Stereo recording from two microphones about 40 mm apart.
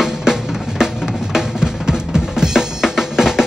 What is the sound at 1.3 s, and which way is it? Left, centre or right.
Drum, centre.